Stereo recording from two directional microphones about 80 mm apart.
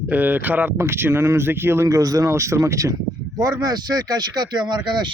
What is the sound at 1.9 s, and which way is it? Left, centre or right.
Speech, right.